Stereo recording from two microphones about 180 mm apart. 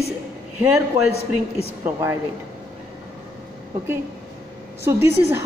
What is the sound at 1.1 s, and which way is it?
Speech, 35° left (ahead or behind).